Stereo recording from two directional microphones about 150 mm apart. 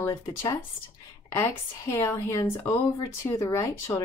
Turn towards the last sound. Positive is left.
turn(degrees=20)  # may be behind; listen again after turning